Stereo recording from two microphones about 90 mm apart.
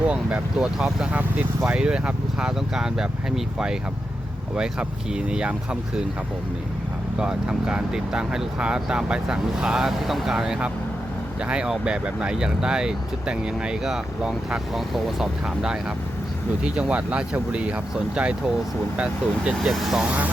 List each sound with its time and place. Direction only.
0.0 s speech: 15° right (ahead or behind)
7.2 s speech: 10° right (ahead or behind)
19.5 s speech: centre (ahead or behind)
20.1 s speech: 15° right (ahead or behind)